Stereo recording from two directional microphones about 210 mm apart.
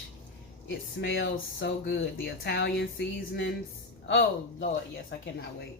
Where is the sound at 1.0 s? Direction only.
60° left (ahead or behind).